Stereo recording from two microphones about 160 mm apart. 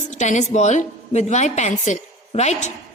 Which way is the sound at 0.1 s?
50° left (ahead or behind).